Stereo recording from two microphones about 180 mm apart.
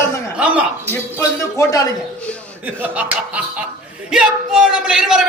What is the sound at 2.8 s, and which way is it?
A man's voice, 10° right (ahead or behind).